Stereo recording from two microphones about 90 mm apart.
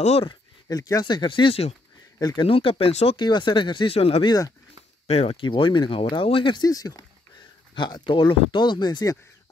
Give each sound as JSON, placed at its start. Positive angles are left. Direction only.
{"t": 0.3, "sound": "a sound", "side_deg": 45}
{"t": 1.0, "sound": "speech", "side_deg": 60}
{"t": 2.1, "sound": "speech", "side_deg": 50}
{"t": 2.4, "sound": "speech", "side_deg": 90}
{"t": 3.3, "sound": "speech", "side_deg": 55}
{"t": 4.3, "sound": "speech", "side_deg": 45}
{"t": 5.1, "sound": "speech", "side_deg": 80}
{"t": 6.6, "sound": "speech", "side_deg": 40}
{"t": 7.7, "sound": "speech", "side_deg": 60}